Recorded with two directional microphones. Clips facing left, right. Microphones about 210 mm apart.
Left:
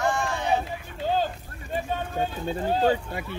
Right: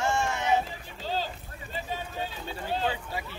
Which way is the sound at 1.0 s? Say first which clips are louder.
Left 7 dB; 50° left (ahead or behind).